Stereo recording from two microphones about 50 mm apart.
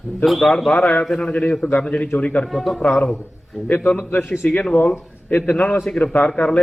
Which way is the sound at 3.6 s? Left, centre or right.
Left.